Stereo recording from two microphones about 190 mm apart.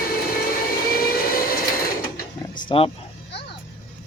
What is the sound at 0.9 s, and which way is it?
Train, 50° left (ahead or behind).